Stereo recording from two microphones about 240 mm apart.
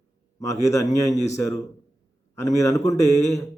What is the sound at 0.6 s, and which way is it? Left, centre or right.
Speech, centre.